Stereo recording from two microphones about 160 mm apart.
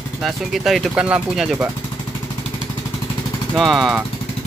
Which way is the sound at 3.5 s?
Centre (ahead or behind).